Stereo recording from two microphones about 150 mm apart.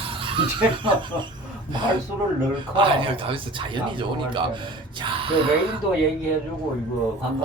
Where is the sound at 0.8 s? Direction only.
30° right (ahead or behind).